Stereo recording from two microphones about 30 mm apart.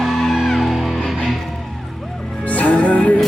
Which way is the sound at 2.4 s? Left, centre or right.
Left.